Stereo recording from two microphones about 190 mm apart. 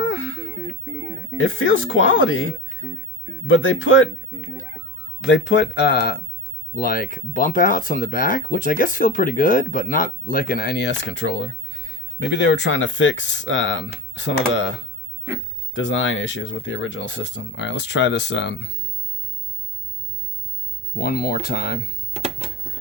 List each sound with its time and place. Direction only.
0.0 s a sound: 90° left
0.6 s music: 10° right (ahead or behind)
1.4 s speech: 90° left
5.3 s speech: 70° left (ahead or behind)
20.9 s speech: 50° left (ahead or behind)